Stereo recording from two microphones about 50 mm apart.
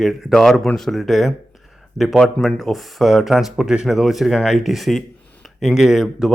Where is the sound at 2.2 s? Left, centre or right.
Centre.